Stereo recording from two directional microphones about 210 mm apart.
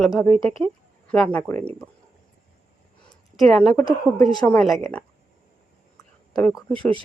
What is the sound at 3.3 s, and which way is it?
A woman's voice, centre (ahead or behind).